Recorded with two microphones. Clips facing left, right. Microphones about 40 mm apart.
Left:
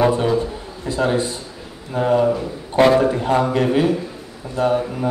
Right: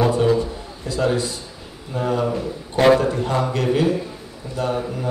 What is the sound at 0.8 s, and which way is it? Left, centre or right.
Speech, left.